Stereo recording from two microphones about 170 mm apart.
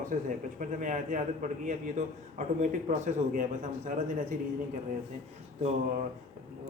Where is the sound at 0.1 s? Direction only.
50° right (ahead or behind).